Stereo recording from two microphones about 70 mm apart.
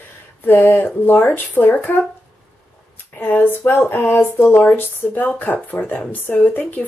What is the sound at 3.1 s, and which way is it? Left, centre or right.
Speech, left.